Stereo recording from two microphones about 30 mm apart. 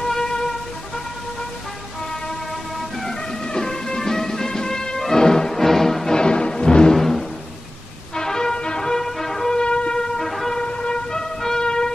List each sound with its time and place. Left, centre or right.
0.0 s music: centre
3.4 s music: left
6.1 s music: left
6.9 s music: centre
9.5 s music: left
9.9 s music: left
10.2 s music: centre
10.5 s vehicle: left